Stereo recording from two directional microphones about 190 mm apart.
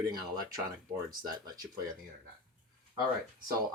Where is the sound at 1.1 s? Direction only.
50° right (ahead or behind).